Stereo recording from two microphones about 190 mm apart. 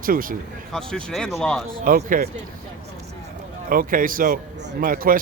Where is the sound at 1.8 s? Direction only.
50° right (ahead or behind).